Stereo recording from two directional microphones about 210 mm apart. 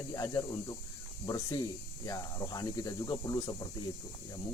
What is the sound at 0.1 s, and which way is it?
Speech, 15° left (ahead or behind).